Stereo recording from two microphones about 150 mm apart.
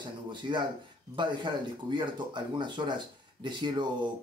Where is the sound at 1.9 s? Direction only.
30° right (ahead or behind).